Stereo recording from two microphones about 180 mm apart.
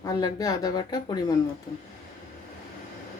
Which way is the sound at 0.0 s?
20° left (ahead or behind).